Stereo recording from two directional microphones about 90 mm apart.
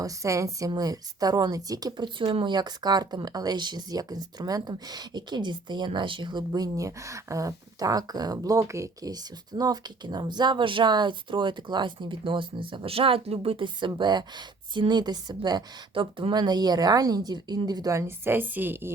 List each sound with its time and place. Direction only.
0.0 s a woman's voice: 35° right (ahead or behind)
2.1 s speech: 75° right (ahead or behind)
2.5 s speech: 50° right (ahead or behind); by 9.1 s 35° right (ahead or behind)
9.6 s speech: 50° right (ahead or behind)
16.0 s speech: 70° right (ahead or behind)
16.3 s speech: 50° right (ahead or behind)
17.9 s a woman's voice: 35° right (ahead or behind)
18.3 s a woman's voice: 20° right (ahead or behind)